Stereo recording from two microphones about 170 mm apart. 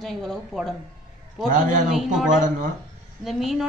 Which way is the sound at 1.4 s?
50° right (ahead or behind).